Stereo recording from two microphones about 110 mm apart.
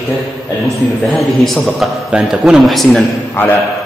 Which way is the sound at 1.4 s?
Centre (ahead or behind).